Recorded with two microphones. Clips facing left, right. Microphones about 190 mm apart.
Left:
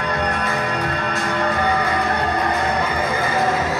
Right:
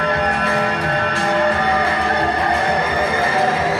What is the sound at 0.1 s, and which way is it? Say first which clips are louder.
Music: right 3 dB; 30° right (ahead or behind).